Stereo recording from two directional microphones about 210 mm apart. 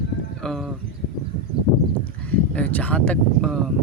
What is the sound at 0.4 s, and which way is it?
Speech, centre (ahead or behind).